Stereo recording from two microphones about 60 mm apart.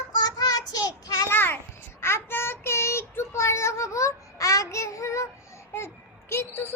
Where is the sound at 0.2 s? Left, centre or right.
Left.